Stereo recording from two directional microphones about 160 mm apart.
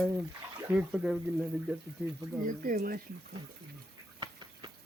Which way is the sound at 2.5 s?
60° right (ahead or behind).